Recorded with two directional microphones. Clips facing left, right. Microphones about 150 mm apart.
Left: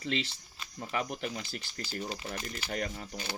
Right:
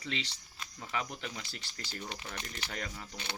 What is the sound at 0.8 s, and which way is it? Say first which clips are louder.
Speech: left 4 dB; 45° left (ahead or behind).